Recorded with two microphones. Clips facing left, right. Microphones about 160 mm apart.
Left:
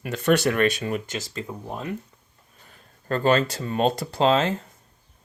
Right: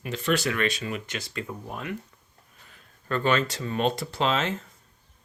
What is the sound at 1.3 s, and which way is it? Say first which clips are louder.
Speech: left 2 dB; 25° left (ahead or behind).